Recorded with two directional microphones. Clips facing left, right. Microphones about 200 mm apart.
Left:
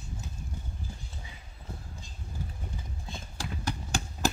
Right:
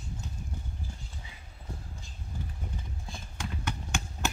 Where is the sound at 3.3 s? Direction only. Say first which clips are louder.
Left 1 dB; 35° left (ahead or behind).